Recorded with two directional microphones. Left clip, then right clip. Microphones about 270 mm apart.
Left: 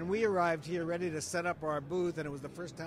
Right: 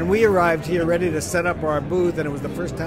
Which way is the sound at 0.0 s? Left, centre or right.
Left.